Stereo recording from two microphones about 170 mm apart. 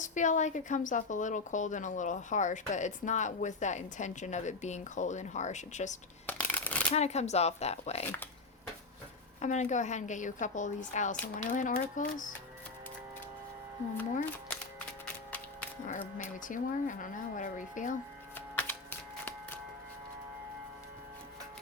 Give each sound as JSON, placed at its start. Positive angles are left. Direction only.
{"t": 0.0, "sound": "a woman's voice", "side_deg": 45}
{"t": 6.2, "sound": "a sound", "side_deg": 10}
{"t": 6.9, "sound": "speech", "side_deg": 40}
{"t": 9.4, "sound": "a woman's voice", "side_deg": 45}
{"t": 15.9, "sound": "a woman's voice", "side_deg": 50}
{"t": 18.3, "sound": "music", "side_deg": 10}